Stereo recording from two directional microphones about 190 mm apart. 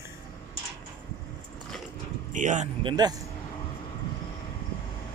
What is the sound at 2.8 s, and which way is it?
Speech, 20° right (ahead or behind).